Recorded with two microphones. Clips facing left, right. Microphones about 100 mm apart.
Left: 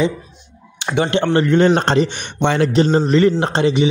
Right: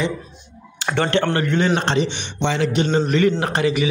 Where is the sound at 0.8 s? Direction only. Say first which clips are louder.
Left 2 dB; 15° left (ahead or behind).